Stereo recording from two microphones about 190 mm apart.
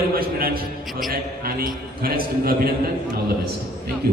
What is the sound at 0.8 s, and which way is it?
Speech, centre (ahead or behind).